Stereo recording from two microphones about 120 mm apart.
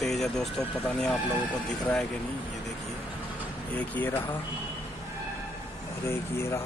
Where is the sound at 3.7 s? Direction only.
15° left (ahead or behind).